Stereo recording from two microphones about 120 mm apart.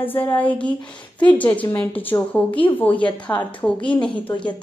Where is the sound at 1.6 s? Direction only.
15° left (ahead or behind).